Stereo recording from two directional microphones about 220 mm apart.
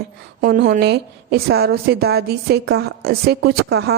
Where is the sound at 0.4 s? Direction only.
40° right (ahead or behind).